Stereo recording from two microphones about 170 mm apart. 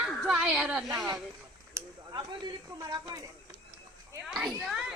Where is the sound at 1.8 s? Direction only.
20° right (ahead or behind).